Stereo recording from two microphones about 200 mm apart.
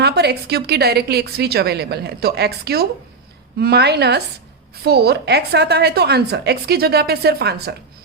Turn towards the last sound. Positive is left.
turn(degrees=-55)  # may be behind; listen again after turning